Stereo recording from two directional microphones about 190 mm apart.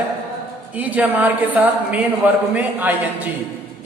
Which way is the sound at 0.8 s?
10° right (ahead or behind).